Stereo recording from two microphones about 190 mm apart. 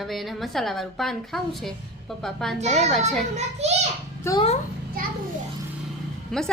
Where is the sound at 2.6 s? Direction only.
35° right (ahead or behind).